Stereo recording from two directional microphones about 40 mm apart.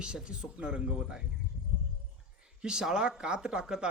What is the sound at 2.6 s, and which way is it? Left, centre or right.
Speech, right.